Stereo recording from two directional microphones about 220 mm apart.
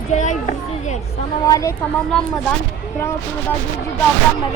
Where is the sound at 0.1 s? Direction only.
35° left (ahead or behind).